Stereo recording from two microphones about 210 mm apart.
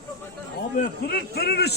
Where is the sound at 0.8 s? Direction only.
50° left (ahead or behind).